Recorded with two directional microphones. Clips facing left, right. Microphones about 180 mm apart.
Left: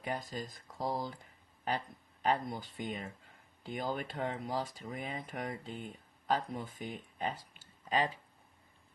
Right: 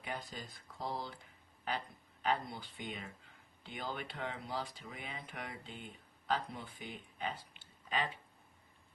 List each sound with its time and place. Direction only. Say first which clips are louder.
0.0 s speech: left 6 dB; 45° left (ahead or behind)